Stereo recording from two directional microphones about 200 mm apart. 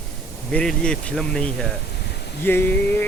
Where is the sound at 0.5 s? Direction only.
5° left (ahead or behind).